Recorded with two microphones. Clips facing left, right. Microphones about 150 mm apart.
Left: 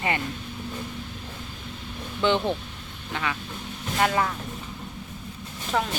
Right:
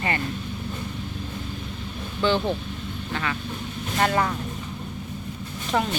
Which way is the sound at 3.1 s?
10° left (ahead or behind).